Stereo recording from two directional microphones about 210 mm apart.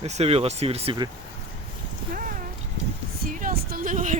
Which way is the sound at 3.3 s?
40° right (ahead or behind).